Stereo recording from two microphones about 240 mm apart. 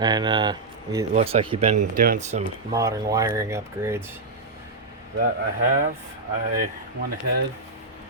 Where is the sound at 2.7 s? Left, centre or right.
Centre.